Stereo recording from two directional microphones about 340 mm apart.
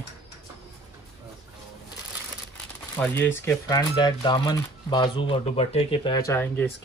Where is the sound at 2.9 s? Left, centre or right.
Centre.